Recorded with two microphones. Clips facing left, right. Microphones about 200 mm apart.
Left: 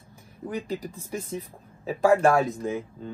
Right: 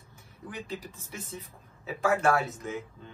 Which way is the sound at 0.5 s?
35° left (ahead or behind).